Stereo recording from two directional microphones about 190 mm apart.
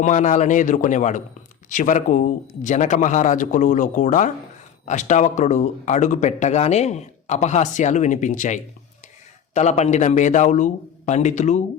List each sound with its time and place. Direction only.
0.0 s speech: 40° left (ahead or behind)